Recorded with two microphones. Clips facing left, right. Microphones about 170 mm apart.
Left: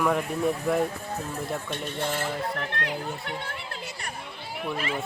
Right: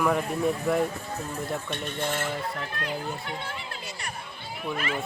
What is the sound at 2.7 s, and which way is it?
Speech, 75° left (ahead or behind).